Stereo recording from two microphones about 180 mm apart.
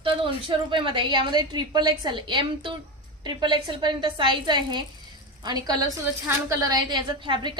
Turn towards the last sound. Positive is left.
turn(degrees=-25)  # may be behind; listen again after turning